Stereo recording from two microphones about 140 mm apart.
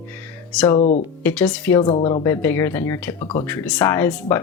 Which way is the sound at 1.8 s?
35° left (ahead or behind).